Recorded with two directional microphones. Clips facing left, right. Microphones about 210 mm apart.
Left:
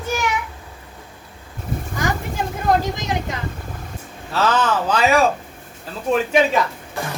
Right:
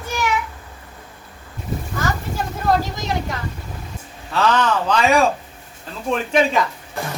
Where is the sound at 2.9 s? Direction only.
15° left (ahead or behind).